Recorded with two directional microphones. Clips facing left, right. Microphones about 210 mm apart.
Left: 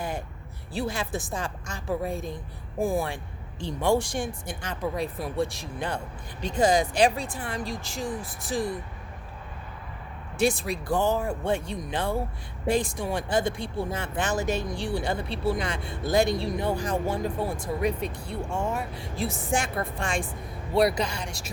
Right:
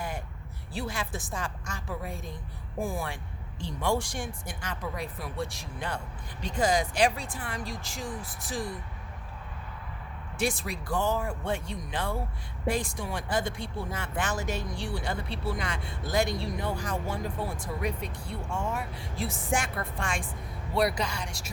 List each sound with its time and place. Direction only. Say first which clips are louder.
0.7 s speech: left 5 dB; 30° left (ahead or behind)
10.3 s speech: left 6 dB; 25° left (ahead or behind)